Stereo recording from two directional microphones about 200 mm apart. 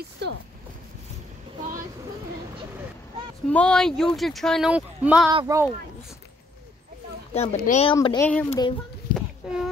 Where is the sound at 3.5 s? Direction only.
5° left (ahead or behind); by 5.7 s 15° right (ahead or behind).